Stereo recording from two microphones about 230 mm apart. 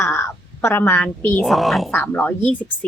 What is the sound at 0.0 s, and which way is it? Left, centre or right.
A woman's voice, centre.